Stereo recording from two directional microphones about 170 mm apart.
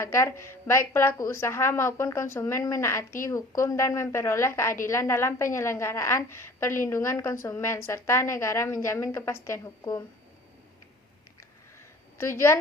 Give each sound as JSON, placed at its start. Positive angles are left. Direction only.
{"t": 0.0, "sound": "a woman's voice", "side_deg": 15}
{"t": 12.1, "sound": "a woman's voice", "side_deg": 15}